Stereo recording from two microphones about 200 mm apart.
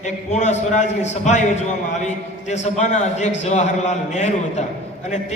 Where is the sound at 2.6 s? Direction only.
35° left (ahead or behind).